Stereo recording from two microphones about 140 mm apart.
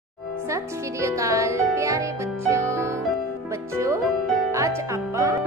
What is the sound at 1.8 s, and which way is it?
Music, 20° right (ahead or behind).